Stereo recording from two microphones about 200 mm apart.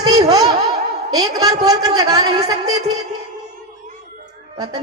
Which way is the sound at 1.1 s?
20° right (ahead or behind).